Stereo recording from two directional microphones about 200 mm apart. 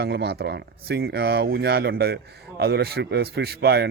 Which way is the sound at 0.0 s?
55° right (ahead or behind).